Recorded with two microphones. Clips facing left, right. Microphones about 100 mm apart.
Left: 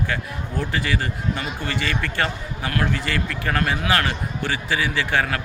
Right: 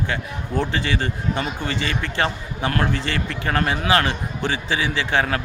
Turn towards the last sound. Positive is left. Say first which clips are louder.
# right 1 dB
turn(degrees=-25)  # may be behind; listen again after turning